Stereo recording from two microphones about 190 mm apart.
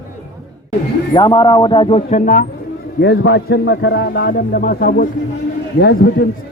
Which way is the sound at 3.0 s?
65° left (ahead or behind).